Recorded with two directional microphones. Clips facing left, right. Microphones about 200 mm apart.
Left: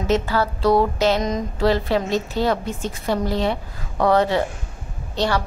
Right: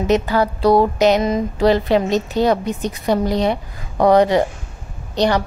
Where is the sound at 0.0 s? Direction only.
15° right (ahead or behind).